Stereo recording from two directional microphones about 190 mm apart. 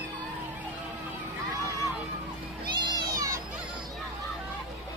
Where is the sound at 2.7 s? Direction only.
20° right (ahead or behind).